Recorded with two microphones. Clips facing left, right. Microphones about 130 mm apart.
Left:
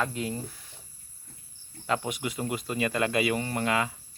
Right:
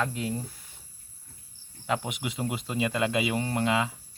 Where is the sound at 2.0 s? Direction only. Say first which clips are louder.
Left 1 dB; 20° right (ahead or behind).